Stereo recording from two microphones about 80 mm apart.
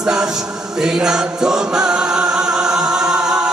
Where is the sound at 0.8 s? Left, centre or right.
Centre.